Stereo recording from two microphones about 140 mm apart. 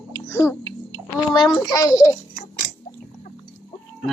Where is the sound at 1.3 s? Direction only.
30° left (ahead or behind).